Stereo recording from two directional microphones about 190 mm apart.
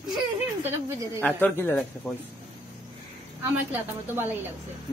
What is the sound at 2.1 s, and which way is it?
Speech, centre (ahead or behind).